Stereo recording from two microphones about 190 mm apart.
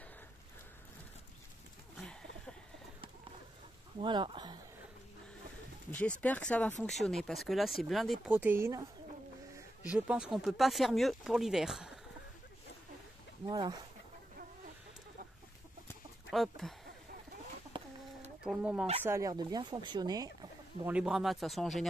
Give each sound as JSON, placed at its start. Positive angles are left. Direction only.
{"t": 2.0, "sound": "a sound", "side_deg": 5}
{"t": 4.0, "sound": "speech", "side_deg": -25}
{"t": 5.9, "sound": "speech", "side_deg": 10}
{"t": 9.8, "sound": "speech", "side_deg": -5}
{"t": 13.5, "sound": "speech", "side_deg": -20}
{"t": 16.3, "sound": "speech", "side_deg": 0}
{"t": 17.7, "sound": "chicken", "side_deg": -25}
{"t": 18.4, "sound": "speech", "side_deg": -5}
{"t": 19.0, "sound": "speech", "side_deg": -15}
{"t": 20.8, "sound": "speech", "side_deg": -5}